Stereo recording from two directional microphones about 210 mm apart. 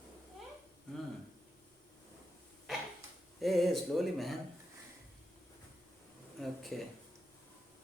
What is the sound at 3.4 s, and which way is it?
Speech, centre (ahead or behind).